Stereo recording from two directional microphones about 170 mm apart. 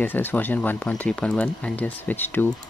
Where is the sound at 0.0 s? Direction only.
10° left (ahead or behind).